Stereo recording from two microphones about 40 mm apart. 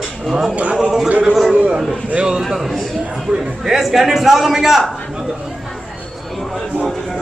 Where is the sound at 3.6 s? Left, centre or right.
Centre.